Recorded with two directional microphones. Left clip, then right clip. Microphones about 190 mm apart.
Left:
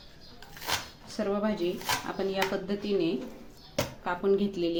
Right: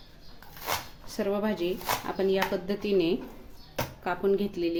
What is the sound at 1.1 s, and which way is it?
Speech, 30° right (ahead or behind).